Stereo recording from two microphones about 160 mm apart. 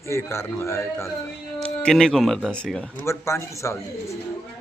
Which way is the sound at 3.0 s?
15° left (ahead or behind).